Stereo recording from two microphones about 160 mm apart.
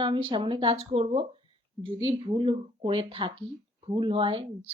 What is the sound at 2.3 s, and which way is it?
Speech, 35° right (ahead or behind).